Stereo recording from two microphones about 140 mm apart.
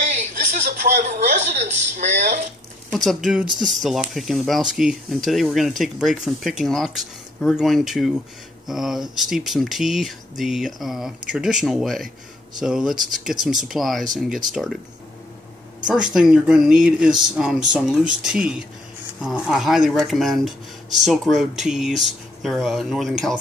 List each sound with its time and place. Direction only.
0.1 s a sound: 60° right (ahead or behind)
2.9 s speech: centre (ahead or behind)
15.9 s speech: 5° right (ahead or behind)